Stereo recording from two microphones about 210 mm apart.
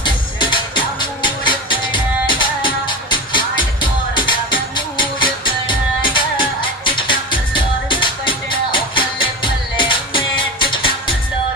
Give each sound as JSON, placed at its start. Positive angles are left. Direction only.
{"t": 0.0, "sound": "music", "side_deg": 20}